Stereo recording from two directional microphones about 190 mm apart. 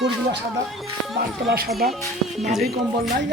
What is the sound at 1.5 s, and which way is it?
Speech, 55° right (ahead or behind).